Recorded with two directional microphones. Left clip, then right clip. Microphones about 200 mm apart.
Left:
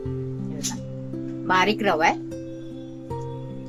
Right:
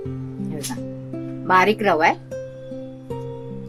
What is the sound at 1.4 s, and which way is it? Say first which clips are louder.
Speech: right 4 dB; 15° right (ahead or behind).